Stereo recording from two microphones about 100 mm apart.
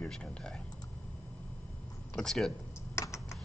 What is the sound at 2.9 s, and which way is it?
Computer keyboard, 30° left (ahead or behind).